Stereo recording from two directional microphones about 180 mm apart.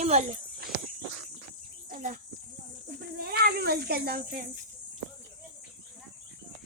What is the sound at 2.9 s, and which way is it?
Cat, 60° right (ahead or behind).